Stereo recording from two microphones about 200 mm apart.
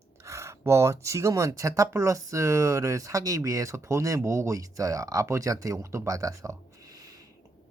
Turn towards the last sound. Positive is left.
turn(degrees=-15)  # may be behind; listen again after turning